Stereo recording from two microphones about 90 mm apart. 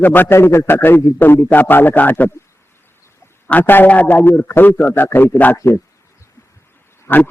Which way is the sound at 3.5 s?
20° left (ahead or behind).